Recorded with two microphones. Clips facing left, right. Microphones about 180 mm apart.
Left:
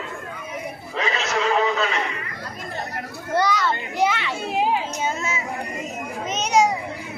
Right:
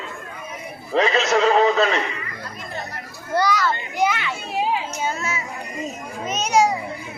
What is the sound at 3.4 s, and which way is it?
Speech, 25° left (ahead or behind).